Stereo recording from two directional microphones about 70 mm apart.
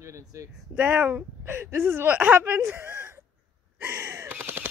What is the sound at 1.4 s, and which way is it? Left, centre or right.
Speech, right.